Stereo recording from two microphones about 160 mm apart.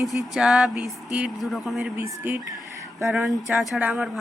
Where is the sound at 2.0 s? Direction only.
15° right (ahead or behind).